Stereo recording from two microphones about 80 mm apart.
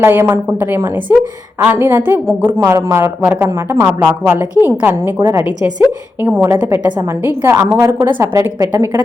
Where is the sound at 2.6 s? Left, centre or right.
Right.